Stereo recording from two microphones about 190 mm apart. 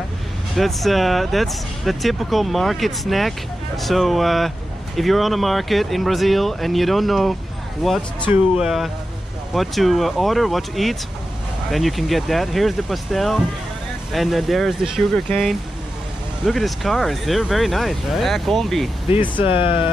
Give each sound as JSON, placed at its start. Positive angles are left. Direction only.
{"t": 0.6, "sound": "speech", "side_deg": 0}
{"t": 19.0, "sound": "speech", "side_deg": 25}